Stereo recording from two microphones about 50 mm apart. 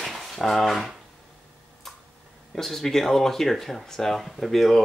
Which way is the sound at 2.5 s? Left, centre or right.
Centre.